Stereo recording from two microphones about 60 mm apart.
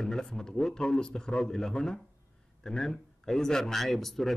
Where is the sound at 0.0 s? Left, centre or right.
Centre.